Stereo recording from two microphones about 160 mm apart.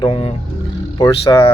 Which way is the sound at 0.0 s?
40° left (ahead or behind).